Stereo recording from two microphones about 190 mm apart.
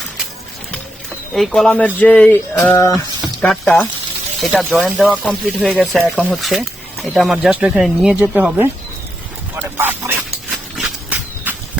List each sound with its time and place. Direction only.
1.3 s speech: centre (ahead or behind)
3.4 s speech: 5° left (ahead or behind)
9.6 s speech: 10° right (ahead or behind)
10.5 s a sound: centre (ahead or behind)